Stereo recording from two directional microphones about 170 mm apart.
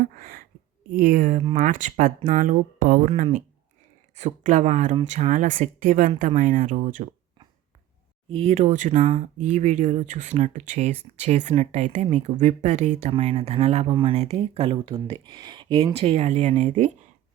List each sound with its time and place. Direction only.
0.2 s a sound: 60° right (ahead or behind)
0.9 s speech: 55° right (ahead or behind)
3.1 s speech: 40° right (ahead or behind)
8.3 s speech: 35° right (ahead or behind)